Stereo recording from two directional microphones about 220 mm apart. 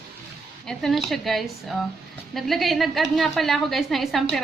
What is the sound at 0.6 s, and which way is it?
A woman's voice, centre (ahead or behind).